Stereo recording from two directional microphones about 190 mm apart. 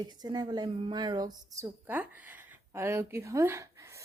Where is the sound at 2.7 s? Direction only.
15° right (ahead or behind).